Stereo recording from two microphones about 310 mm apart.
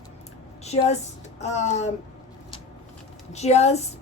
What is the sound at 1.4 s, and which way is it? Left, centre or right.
Speech, left.